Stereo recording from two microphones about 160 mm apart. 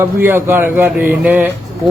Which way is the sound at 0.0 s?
15° right (ahead or behind).